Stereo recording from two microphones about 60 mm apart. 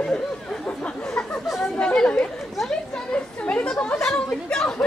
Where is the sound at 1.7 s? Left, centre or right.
Centre.